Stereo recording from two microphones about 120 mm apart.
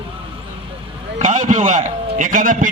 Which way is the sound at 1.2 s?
90° right.